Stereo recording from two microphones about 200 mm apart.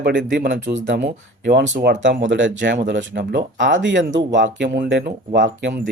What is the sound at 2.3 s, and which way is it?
Speech, 65° right (ahead or behind).